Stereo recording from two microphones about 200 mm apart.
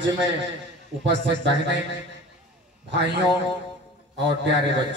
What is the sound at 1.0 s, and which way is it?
Speech, 60° right (ahead or behind).